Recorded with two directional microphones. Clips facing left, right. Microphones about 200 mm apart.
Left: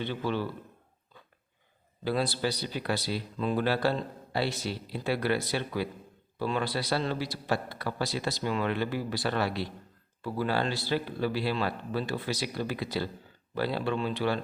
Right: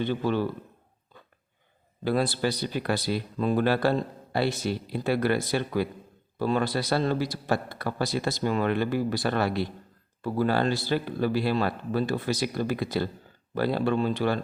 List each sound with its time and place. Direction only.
0.0 s speech: 45° right (ahead or behind)
2.0 s speech: 50° right (ahead or behind)